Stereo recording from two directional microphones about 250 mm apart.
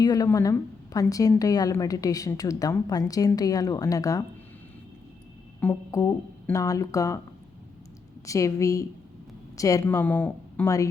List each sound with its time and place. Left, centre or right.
0.0 s a woman's voice: centre
5.5 s a woman's voice: centre
8.3 s a woman's voice: centre